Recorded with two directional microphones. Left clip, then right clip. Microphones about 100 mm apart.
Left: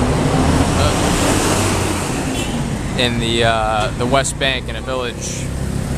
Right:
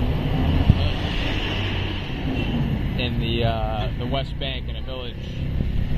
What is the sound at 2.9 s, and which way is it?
Speech, 65° left (ahead or behind).